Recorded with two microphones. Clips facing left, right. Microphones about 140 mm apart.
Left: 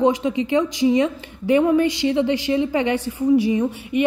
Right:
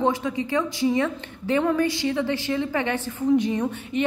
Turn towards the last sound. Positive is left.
turn(degrees=10)  # may be behind; listen again after turning